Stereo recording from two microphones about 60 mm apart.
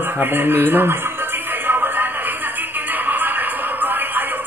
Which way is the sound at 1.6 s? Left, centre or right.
Right.